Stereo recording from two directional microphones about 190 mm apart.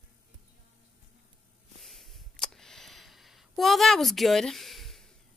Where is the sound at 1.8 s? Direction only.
Centre (ahead or behind).